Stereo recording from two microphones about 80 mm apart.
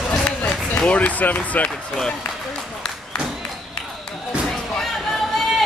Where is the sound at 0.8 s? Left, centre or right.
Centre.